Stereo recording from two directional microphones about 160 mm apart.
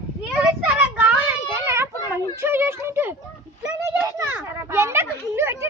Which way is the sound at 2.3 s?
15° right (ahead or behind).